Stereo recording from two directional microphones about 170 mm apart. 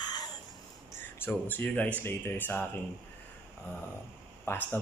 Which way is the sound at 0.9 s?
10° left (ahead or behind).